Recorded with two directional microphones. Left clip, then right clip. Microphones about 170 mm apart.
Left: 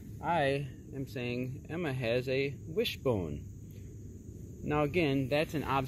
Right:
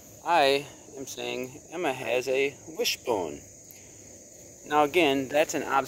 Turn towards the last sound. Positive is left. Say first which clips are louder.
# right 7 dB
turn(degrees=-25)  # may be behind; listen again after turning